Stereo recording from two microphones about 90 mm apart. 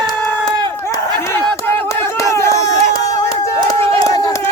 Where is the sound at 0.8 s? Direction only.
30° left (ahead or behind).